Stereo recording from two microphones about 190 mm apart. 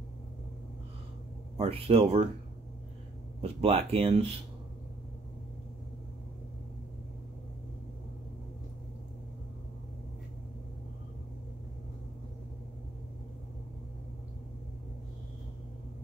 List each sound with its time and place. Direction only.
1.6 s speech: 30° right (ahead or behind)
3.3 s speech: 30° right (ahead or behind)